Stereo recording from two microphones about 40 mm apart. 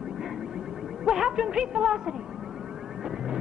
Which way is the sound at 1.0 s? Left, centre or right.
Centre.